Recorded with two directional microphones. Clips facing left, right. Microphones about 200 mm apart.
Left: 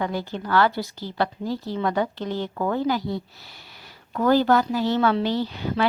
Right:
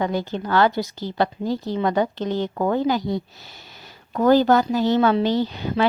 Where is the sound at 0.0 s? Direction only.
20° right (ahead or behind).